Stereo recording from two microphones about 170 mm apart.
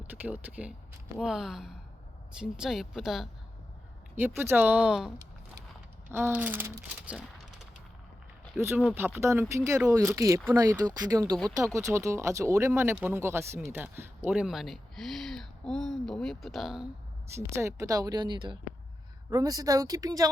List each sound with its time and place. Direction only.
0.2 s speech: 10° right (ahead or behind)
4.4 s speech: 15° right (ahead or behind)
8.6 s speech: 15° right (ahead or behind)
17.3 s speech: 15° right (ahead or behind)